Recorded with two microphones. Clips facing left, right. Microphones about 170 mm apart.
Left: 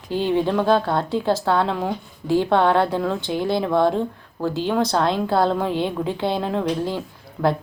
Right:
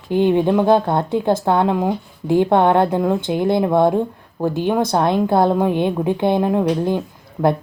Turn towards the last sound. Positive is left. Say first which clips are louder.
# right 3 dB
turn(degrees=-20)  # may be behind; listen again after turning